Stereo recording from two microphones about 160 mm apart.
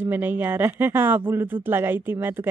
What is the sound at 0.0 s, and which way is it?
Speech, 10° right (ahead or behind).